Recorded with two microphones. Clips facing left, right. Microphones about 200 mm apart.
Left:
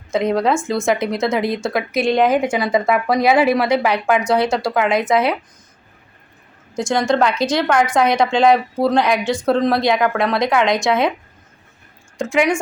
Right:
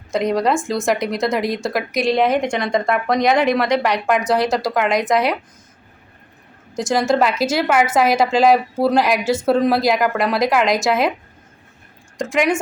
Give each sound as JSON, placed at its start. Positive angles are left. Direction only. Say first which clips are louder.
{"t": 0.1, "sound": "speech", "louder": "left 1 dB", "side_deg": 0}
{"t": 6.7, "sound": "speech", "louder": "even", "side_deg": -5}
{"t": 12.1, "sound": "a woman's voice", "louder": "left 1 dB", "side_deg": 0}